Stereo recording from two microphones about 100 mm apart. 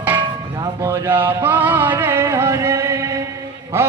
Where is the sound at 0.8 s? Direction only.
25° right (ahead or behind).